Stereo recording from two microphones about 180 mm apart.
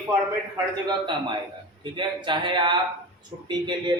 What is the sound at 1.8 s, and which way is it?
Speech, 25° right (ahead or behind).